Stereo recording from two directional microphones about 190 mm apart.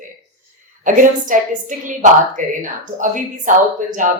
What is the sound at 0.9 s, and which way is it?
A woman's voice, 45° right (ahead or behind).